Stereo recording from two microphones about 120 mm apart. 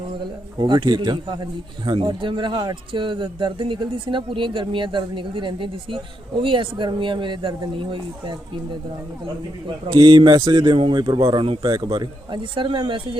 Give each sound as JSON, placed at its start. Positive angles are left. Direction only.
{"t": 0.6, "sound": "a man's voice", "side_deg": -40}
{"t": 9.6, "sound": "a man's voice", "side_deg": -40}